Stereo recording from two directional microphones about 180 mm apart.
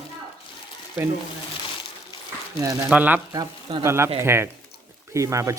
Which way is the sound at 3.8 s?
15° right (ahead or behind).